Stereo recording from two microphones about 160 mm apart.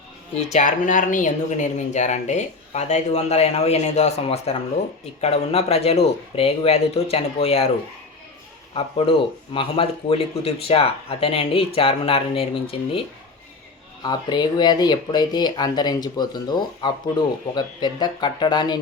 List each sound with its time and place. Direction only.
0.3 s speech: 50° left (ahead or behind)
8.7 s speech: 35° left (ahead or behind)
14.0 s speech: 25° left (ahead or behind)